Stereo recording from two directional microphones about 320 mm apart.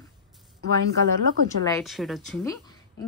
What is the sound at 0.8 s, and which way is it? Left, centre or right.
Speech, right.